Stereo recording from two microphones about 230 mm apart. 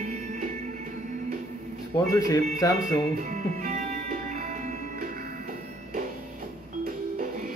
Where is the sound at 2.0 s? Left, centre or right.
Centre.